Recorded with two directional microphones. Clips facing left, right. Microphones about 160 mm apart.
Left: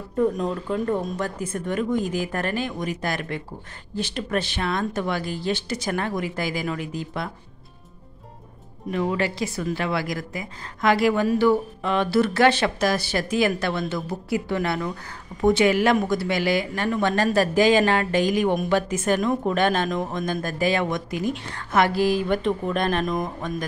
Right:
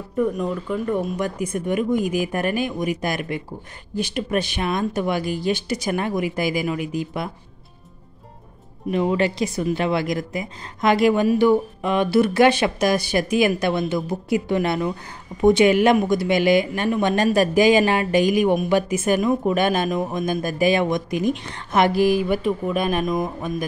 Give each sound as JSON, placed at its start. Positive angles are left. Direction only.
{"t": 0.8, "sound": "a woman's voice", "side_deg": -15}
{"t": 8.9, "sound": "a woman's voice", "side_deg": -20}